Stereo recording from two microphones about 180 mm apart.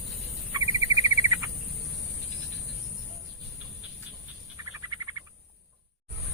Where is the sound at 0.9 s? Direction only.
20° right (ahead or behind).